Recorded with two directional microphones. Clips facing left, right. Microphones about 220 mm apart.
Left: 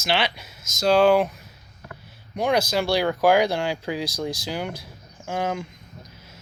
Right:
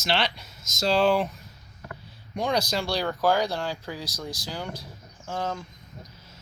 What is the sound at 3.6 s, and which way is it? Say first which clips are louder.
Speech: left 5 dB; 75° left (ahead or behind).